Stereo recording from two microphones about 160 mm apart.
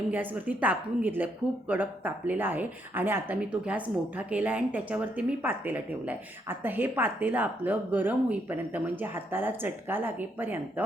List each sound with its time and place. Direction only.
0.1 s speech: 10° right (ahead or behind)